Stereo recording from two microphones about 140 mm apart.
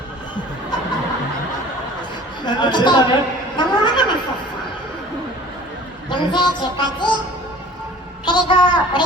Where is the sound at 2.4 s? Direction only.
30° left (ahead or behind).